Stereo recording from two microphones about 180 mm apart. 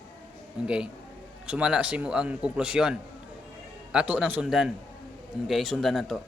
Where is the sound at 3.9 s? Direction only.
5° right (ahead or behind).